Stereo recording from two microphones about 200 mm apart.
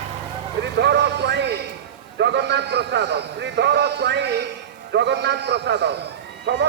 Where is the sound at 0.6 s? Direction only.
60° right (ahead or behind).